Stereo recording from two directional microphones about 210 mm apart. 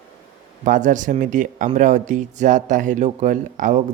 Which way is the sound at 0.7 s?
35° right (ahead or behind).